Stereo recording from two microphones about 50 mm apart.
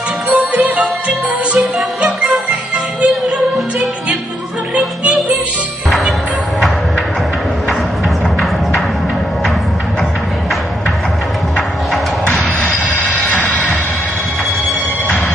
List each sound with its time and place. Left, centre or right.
0.3 s music: centre
13.3 s music: left